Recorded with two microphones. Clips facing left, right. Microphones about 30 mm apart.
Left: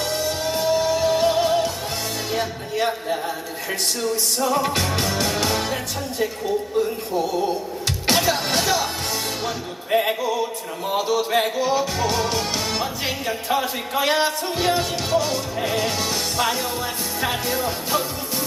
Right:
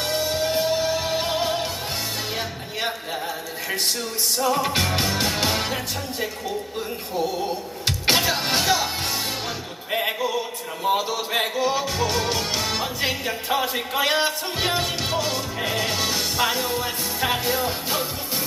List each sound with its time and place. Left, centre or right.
0.0 s music: right; by 4.7 s centre
4.7 s music: centre
7.2 s music: centre
9.9 s a sound: centre
10.8 s music: centre